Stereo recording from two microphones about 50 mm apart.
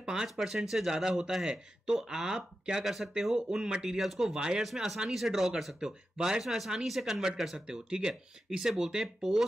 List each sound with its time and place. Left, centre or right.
0.0 s speech: centre
4.4 s speech: centre
7.5 s speech: centre